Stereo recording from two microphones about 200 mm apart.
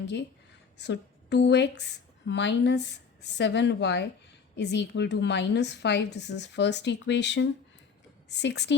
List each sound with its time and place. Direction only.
0.8 s a woman's voice: 60° left (ahead or behind)